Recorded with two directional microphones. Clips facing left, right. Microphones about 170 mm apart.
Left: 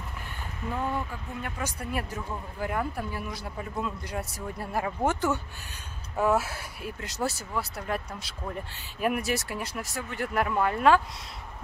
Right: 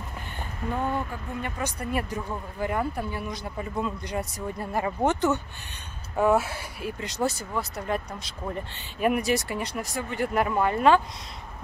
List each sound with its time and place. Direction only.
0.6 s speech: 45° right (ahead or behind)
1.4 s speech: 5° left (ahead or behind)